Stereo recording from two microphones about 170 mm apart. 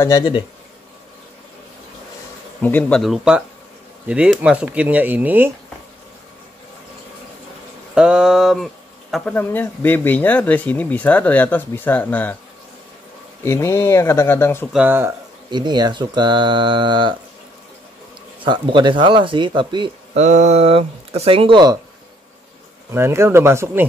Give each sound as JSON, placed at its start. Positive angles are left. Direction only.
{"t": 0.0, "sound": "speech", "side_deg": 25}
{"t": 2.6, "sound": "speech", "side_deg": 10}
{"t": 7.9, "sound": "a sound", "side_deg": -5}
{"t": 9.1, "sound": "speech", "side_deg": 10}
{"t": 13.4, "sound": "speech", "side_deg": 15}
{"t": 14.7, "sound": "speech", "side_deg": -10}
{"t": 15.5, "sound": "speech", "side_deg": -25}
{"t": 18.4, "sound": "speech", "side_deg": -30}
{"t": 20.2, "sound": "speech", "side_deg": -45}
{"t": 22.8, "sound": "speech", "side_deg": -15}